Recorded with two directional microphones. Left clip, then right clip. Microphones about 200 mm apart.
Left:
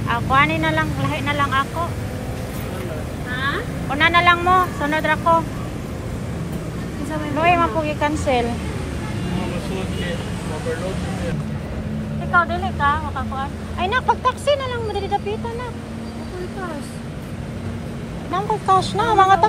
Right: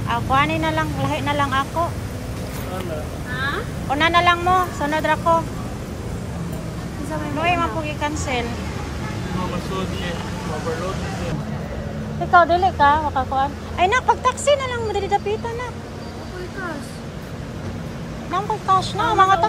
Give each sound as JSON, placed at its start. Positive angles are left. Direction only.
{"t": 0.1, "sound": "speech", "side_deg": -15}
{"t": 3.9, "sound": "speech", "side_deg": -20}
{"t": 7.3, "sound": "a woman's voice", "side_deg": -5}
{"t": 12.3, "sound": "speech", "side_deg": -20}
{"t": 18.7, "sound": "speech", "side_deg": -10}